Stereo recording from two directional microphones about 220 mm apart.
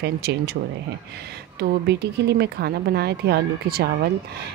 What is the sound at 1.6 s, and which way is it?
A woman's voice, 50° right (ahead or behind).